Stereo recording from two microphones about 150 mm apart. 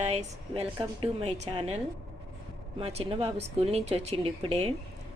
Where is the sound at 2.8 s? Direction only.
40° right (ahead or behind).